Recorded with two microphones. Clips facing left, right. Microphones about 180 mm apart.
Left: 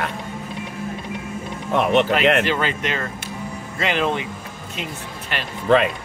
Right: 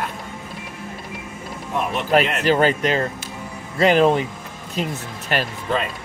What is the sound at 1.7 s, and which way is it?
Speech, 75° left (ahead or behind).